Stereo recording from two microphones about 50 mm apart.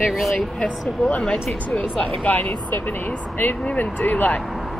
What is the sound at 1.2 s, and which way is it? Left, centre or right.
Speech, centre.